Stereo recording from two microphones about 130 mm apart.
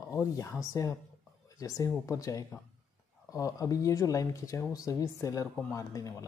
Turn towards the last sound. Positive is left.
turn(degrees=25)  # may be behind; listen again after turning